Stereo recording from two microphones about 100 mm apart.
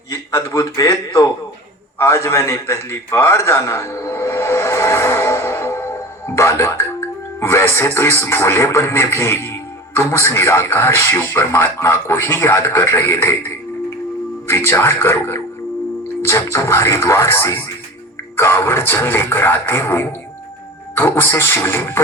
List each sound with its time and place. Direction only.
0.1 s a man's voice: 30° left (ahead or behind)
2.0 s a sound: 30° left (ahead or behind)
6.3 s speech: 30° left (ahead or behind)